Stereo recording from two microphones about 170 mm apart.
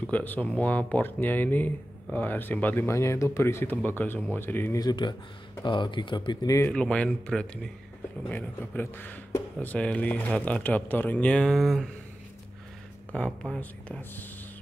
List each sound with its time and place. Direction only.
0.0 s speech: 10° left (ahead or behind)
6.7 s speech: 5° left (ahead or behind)
13.1 s speech: 5° left (ahead or behind)